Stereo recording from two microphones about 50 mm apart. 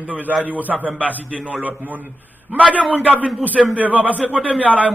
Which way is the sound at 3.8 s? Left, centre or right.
Right.